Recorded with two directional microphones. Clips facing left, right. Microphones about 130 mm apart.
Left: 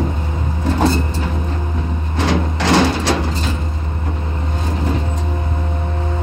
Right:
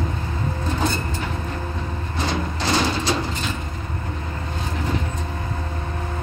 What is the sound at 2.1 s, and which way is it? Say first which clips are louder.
Vehicle: left 7 dB; 90° left.